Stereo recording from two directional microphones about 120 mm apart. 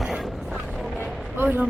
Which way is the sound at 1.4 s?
15° right (ahead or behind).